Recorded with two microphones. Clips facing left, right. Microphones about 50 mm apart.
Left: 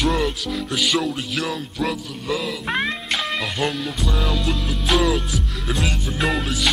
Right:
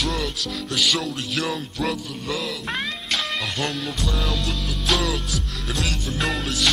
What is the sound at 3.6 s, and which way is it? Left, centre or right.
Music, centre.